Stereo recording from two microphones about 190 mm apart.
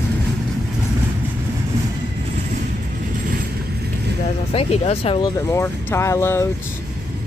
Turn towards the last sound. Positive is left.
turn(degrees=15)  # may be behind; listen again after turning